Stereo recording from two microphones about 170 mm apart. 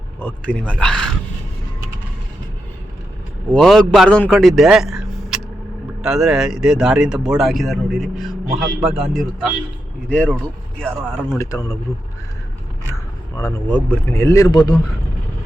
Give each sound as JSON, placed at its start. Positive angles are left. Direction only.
{"t": 0.2, "sound": "speech", "side_deg": 10}
{"t": 3.5, "sound": "speech", "side_deg": 5}
{"t": 11.3, "sound": "speech", "side_deg": 15}
{"t": 13.3, "sound": "speech", "side_deg": 15}